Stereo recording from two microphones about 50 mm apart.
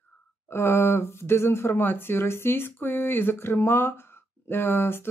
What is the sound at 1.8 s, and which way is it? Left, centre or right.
Speech, left.